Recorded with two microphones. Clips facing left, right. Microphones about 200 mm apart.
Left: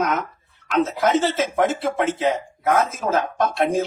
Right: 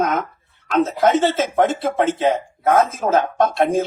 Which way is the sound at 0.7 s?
50° right (ahead or behind).